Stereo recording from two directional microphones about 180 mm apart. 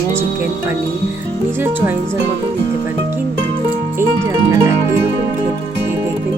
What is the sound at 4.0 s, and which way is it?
Music, 20° right (ahead or behind).